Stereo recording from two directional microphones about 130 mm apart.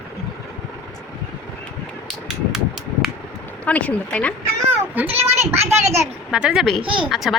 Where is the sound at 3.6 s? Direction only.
10° left (ahead or behind).